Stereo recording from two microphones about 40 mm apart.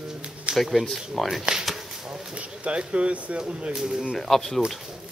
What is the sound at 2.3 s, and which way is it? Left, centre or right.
Speech, right.